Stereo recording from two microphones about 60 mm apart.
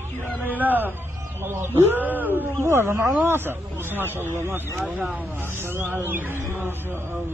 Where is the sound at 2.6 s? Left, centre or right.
Right.